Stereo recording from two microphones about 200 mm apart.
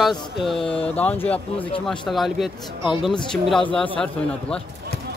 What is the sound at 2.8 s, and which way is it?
Speech, 25° left (ahead or behind).